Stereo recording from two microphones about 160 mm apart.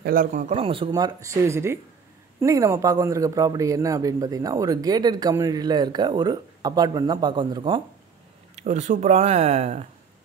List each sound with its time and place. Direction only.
0.0 s speech: 60° right (ahead or behind)
0.6 s speech: 35° right (ahead or behind)
8.5 s speech: 45° right (ahead or behind)